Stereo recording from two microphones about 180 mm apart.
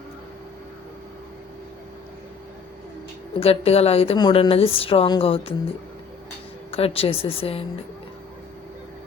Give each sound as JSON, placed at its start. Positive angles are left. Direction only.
{"t": 3.4, "sound": "a woman's voice", "side_deg": 35}
{"t": 6.7, "sound": "a woman's voice", "side_deg": 35}